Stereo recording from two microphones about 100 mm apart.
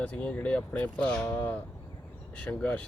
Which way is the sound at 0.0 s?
15° left (ahead or behind).